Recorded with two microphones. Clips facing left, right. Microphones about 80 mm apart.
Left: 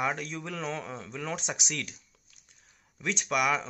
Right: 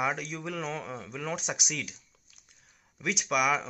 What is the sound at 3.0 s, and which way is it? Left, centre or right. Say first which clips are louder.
Speech: right 1 dB; centre.